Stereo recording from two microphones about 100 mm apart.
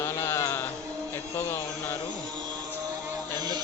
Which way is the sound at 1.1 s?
25° left (ahead or behind).